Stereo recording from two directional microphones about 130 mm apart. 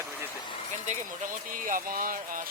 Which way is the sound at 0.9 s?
85° right.